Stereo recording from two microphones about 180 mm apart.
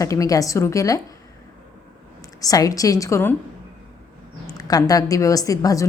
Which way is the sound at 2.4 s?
20° left (ahead or behind).